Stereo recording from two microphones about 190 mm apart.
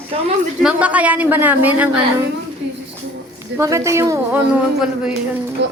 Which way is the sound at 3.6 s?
15° right (ahead or behind).